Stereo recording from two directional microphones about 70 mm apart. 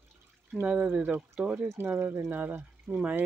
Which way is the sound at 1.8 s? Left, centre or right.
Right.